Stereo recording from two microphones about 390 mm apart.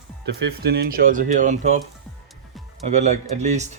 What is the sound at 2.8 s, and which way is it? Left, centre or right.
Speech, centre.